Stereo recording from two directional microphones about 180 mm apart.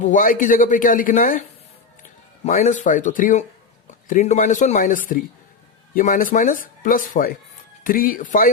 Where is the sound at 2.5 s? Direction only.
40° left (ahead or behind).